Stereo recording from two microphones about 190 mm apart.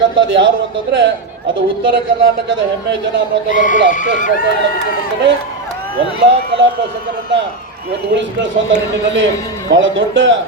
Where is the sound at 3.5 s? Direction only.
45° left (ahead or behind).